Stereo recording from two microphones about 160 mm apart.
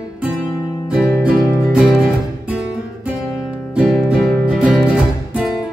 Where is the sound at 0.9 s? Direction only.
5° right (ahead or behind).